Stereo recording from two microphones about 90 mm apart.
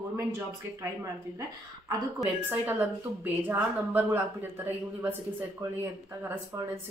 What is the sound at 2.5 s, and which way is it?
A woman's voice, 20° right (ahead or behind).